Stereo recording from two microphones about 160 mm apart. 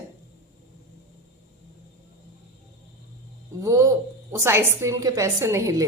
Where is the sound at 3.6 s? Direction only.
20° right (ahead or behind).